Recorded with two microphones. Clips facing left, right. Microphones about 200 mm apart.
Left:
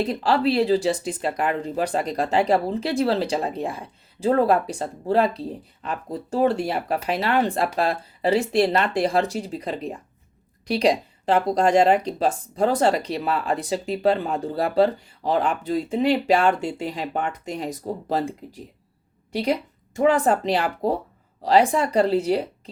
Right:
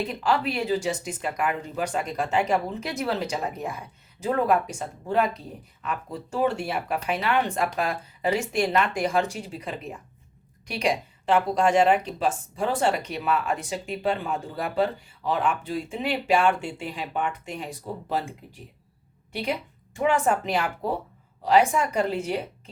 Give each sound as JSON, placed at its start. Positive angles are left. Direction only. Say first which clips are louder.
{"t": 0.0, "sound": "speech", "louder": "left 5 dB", "side_deg": 35}